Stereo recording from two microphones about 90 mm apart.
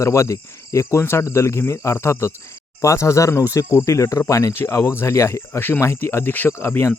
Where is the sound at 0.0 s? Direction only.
35° left (ahead or behind).